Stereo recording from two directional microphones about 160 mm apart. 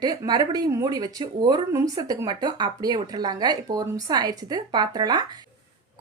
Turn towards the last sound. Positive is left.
turn(degrees=-25)  # may be behind; listen again after turning